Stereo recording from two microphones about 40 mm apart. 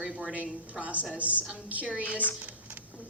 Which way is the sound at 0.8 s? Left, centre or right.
Right.